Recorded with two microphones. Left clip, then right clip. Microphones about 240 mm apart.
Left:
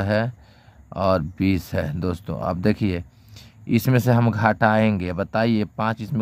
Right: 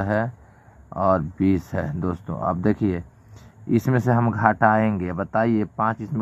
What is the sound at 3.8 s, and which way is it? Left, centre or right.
Speech, left.